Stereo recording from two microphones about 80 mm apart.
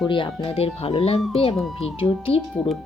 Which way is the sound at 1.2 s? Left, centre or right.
Centre.